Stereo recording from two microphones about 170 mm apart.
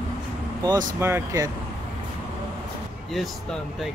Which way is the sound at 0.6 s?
20° right (ahead or behind).